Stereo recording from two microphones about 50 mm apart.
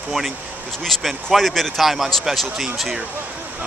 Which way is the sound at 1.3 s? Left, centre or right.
Centre.